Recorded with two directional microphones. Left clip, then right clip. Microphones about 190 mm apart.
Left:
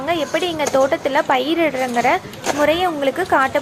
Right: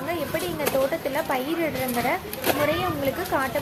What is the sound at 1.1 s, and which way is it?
Speech, 20° left (ahead or behind).